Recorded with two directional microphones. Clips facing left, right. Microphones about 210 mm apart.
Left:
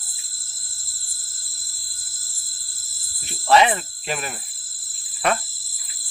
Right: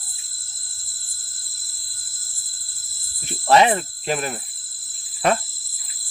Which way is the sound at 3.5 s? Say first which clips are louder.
Right 1 dB; 40° right (ahead or behind).